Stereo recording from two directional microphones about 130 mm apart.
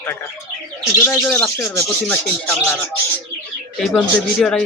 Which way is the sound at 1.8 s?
10° left (ahead or behind).